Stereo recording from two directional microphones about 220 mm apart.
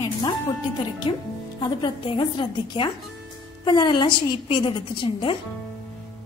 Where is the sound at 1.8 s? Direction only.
20° left (ahead or behind).